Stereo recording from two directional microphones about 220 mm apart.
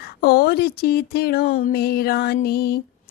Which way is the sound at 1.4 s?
30° left (ahead or behind).